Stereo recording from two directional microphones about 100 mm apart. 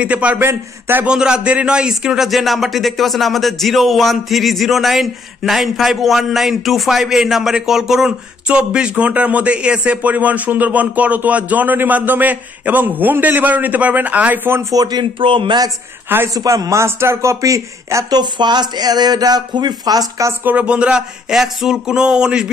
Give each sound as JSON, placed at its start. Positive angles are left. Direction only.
{"t": 0.0, "sound": "a man's voice", "side_deg": -15}
{"t": 1.0, "sound": "a man's voice", "side_deg": -10}
{"t": 14.7, "sound": "speech", "side_deg": -40}
{"t": 16.3, "sound": "speech", "side_deg": -35}
{"t": 18.2, "sound": "speech", "side_deg": -45}
{"t": 20.4, "sound": "a man's voice", "side_deg": -10}